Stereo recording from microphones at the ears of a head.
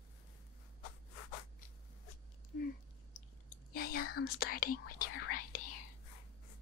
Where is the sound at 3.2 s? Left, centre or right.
Left.